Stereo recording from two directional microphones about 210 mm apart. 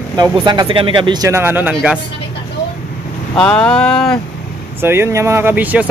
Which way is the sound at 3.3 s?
5° left (ahead or behind).